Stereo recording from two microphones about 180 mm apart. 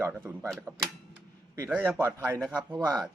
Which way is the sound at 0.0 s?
10° right (ahead or behind).